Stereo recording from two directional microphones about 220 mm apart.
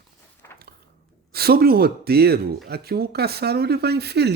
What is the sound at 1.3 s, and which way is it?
Speech, 45° right (ahead or behind).